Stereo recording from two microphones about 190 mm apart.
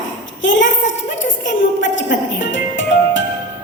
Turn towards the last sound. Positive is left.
turn(degrees=80)